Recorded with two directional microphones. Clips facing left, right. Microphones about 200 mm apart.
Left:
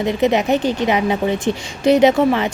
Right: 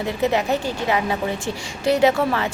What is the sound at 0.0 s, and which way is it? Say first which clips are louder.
A woman's voice: left 5 dB; 20° left (ahead or behind).